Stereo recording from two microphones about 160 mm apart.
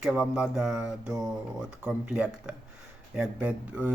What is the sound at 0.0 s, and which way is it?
Speech, 10° right (ahead or behind).